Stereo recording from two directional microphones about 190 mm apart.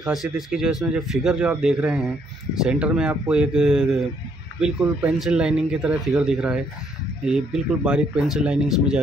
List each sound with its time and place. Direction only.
0.0 s speech: centre (ahead or behind)